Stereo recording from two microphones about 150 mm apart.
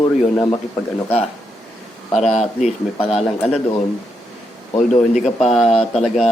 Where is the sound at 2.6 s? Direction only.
45° left (ahead or behind).